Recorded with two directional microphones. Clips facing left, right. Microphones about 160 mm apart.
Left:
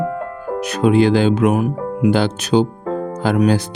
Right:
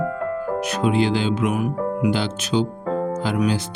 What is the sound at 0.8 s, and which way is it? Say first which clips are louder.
Speech: left 7 dB; 50° left (ahead or behind).